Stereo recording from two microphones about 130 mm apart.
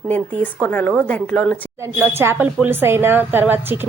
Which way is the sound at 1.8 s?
20° right (ahead or behind).